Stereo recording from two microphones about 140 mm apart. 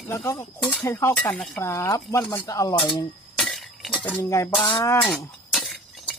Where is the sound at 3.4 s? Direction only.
Centre (ahead or behind).